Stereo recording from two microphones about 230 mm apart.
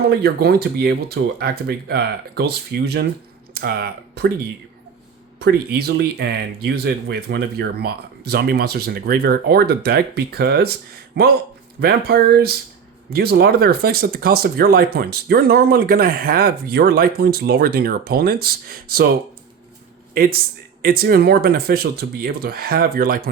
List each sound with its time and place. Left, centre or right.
0.1 s speech: right
5.4 s speech: right
20.1 s speech: right